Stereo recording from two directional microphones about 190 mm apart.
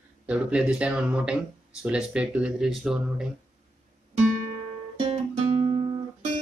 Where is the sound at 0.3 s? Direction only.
5° right (ahead or behind).